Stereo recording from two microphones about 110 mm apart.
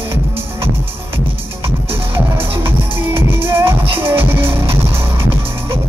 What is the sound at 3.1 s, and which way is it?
Music, 20° right (ahead or behind).